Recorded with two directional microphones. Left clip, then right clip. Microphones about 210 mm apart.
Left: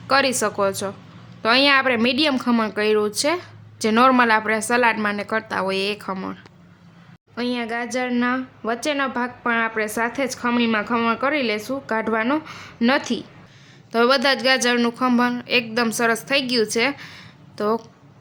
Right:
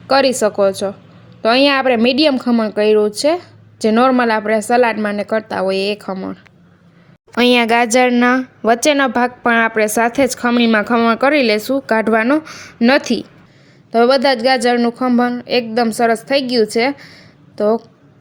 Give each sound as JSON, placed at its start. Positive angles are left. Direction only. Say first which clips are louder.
{"t": 0.1, "sound": "a woman's voice", "louder": "right 6 dB", "side_deg": -20}
{"t": 2.3, "sound": "a woman's voice", "louder": "right 5 dB", "side_deg": -10}
{"t": 7.3, "sound": "a woman's voice", "louder": "right 14 dB", "side_deg": -45}